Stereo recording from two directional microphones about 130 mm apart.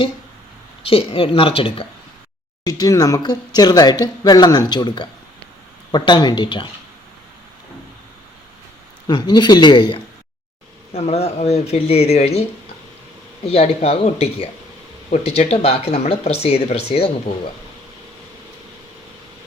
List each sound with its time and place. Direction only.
0.8 s speech: 45° left (ahead or behind)
2.6 s speech: 30° left (ahead or behind)
9.0 s speech: 35° left (ahead or behind)
10.9 s speech: 55° left (ahead or behind)
13.5 s speech: 50° left (ahead or behind)